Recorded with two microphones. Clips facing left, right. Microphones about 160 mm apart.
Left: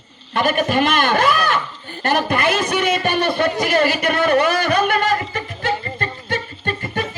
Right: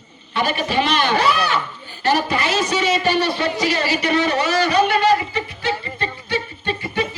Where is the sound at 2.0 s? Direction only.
55° left (ahead or behind).